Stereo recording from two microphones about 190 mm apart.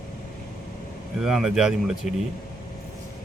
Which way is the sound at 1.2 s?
Centre (ahead or behind).